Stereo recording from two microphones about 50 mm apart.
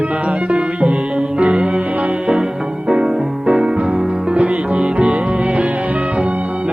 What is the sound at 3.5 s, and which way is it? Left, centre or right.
Music, centre.